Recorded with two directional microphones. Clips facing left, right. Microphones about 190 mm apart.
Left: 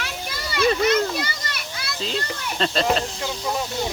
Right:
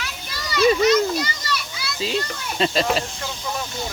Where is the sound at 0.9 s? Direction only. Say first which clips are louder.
Right 3 dB; 55° left (ahead or behind).